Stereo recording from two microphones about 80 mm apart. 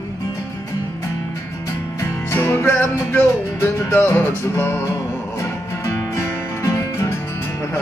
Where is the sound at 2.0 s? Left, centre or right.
Left.